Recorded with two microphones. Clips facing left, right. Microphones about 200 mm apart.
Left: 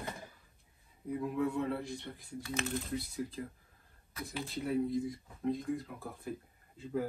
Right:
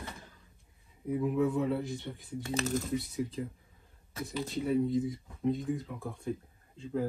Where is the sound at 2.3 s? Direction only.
25° right (ahead or behind).